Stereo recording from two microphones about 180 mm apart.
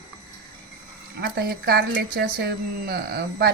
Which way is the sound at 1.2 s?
65° right (ahead or behind).